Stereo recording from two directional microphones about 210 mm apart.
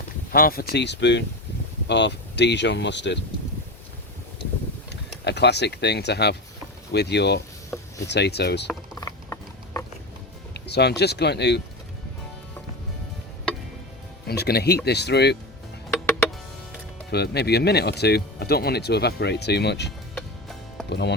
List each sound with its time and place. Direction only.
0.3 s speech: 45° left (ahead or behind)
4.9 s speech: 55° left (ahead or behind)
9.0 s mechanisms: 15° left (ahead or behind)
10.5 s speech: 50° left (ahead or behind)
14.3 s speech: 50° left (ahead or behind)
17.1 s speech: 50° left (ahead or behind)
20.1 s music: centre (ahead or behind)
20.9 s speech: 55° left (ahead or behind)